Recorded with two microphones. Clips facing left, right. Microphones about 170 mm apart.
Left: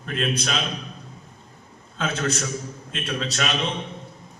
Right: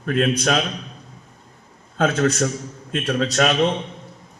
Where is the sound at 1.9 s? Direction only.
50° right (ahead or behind).